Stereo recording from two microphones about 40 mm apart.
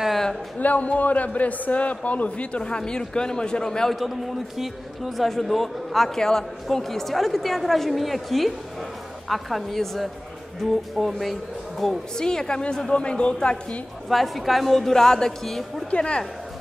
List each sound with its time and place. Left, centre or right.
0.6 s a man's voice: left; by 3.9 s centre
4.6 s a man's voice: centre
12.2 s speech: centre
14.0 s a man's voice: centre
15.9 s speech: left